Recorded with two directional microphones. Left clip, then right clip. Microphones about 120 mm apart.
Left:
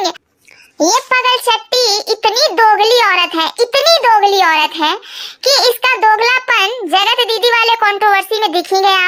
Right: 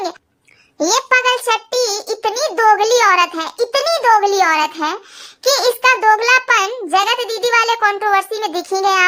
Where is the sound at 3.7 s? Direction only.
30° left (ahead or behind).